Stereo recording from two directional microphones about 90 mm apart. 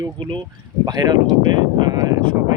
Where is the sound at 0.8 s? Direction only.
50° right (ahead or behind).